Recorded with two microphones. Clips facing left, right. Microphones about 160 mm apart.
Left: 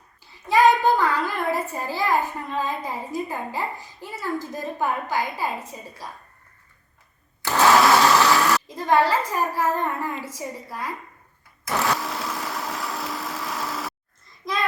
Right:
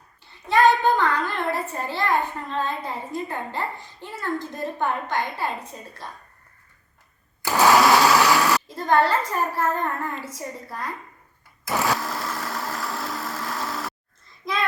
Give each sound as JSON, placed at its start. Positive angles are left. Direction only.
{"t": 0.2, "sound": "a child's voice", "side_deg": 0}
{"t": 7.4, "sound": "blender", "side_deg": -15}
{"t": 7.7, "sound": "a sound", "side_deg": 0}
{"t": 8.4, "sound": "a child's voice", "side_deg": 0}
{"t": 11.6, "sound": "blender", "side_deg": 0}
{"t": 14.4, "sound": "child singing", "side_deg": 0}